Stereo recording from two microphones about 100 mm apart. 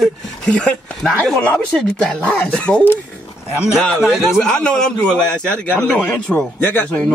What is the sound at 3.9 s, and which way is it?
A man's voice, centre (ahead or behind).